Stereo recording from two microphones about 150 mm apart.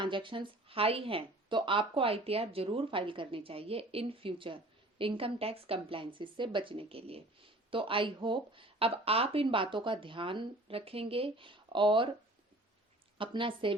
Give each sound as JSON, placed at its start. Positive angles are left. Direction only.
{"t": 0.0, "sound": "speech", "side_deg": -35}
{"t": 13.1, "sound": "speech", "side_deg": -35}